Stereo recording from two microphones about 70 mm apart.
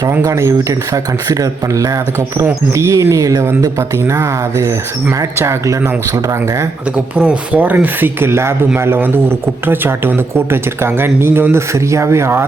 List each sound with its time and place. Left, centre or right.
0.2 s speech: right
3.6 s speech: right
6.9 s speech: centre; by 12.5 s right